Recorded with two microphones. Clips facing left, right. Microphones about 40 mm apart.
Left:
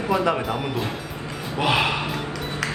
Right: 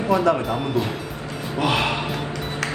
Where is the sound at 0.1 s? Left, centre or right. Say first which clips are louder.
Right 3 dB; centre.